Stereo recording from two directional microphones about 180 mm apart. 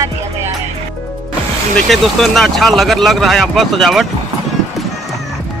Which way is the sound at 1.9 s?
Centre (ahead or behind).